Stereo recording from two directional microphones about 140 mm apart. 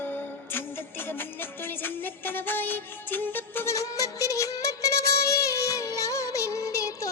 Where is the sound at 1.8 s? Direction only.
15° left (ahead or behind).